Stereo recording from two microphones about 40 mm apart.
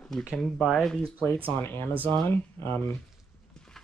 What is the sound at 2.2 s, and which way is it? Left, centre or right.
Speech, left.